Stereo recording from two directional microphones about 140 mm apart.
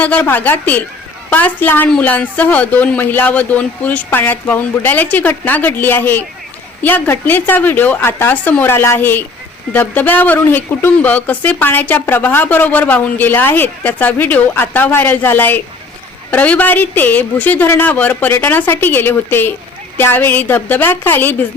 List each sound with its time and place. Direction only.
0.0 s speech: 10° left (ahead or behind)